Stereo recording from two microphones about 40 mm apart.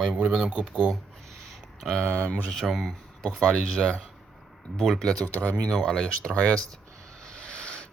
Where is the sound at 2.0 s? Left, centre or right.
Right.